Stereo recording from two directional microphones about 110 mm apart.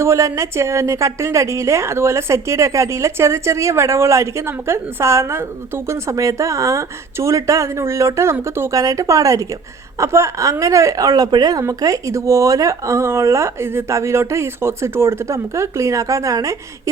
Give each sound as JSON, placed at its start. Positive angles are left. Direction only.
{"t": 0.0, "sound": "a woman's voice", "side_deg": -25}